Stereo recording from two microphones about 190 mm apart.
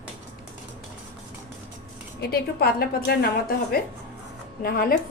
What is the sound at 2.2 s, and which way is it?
A woman's voice, 55° left (ahead or behind).